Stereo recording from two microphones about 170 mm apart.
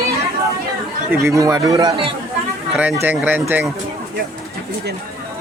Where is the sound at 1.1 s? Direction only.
15° right (ahead or behind).